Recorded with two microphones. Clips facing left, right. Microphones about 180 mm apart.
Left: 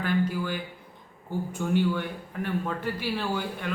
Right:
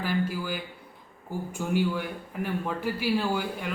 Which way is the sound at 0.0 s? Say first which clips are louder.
Left 2 dB; 5° right (ahead or behind).